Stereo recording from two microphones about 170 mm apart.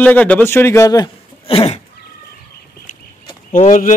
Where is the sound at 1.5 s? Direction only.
35° left (ahead or behind).